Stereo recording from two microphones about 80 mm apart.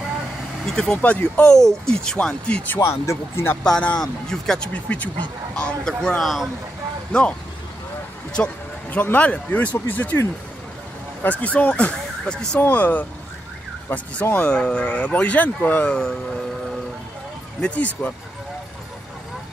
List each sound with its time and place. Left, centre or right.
0.7 s speech: centre
1.0 s speech: centre
2.7 s speech: left
3.6 s speech: centre
4.7 s speech: centre
7.1 s speech: centre
8.4 s speech: left
11.2 s speech: centre
12.5 s speech: left
17.6 s speech: centre